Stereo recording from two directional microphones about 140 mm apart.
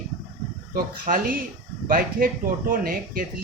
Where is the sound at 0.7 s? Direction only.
85° right.